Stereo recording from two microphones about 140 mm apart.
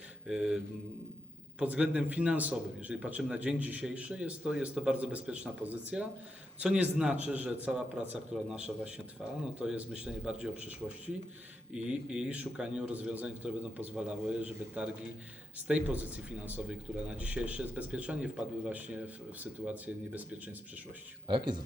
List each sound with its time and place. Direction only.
0.3 s mantra: 5° right (ahead or behind)
1.5 s a man's voice: 10° right (ahead or behind)
21.2 s speech: 35° right (ahead or behind)